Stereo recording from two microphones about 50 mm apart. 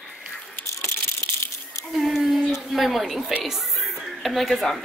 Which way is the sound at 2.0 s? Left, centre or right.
Centre.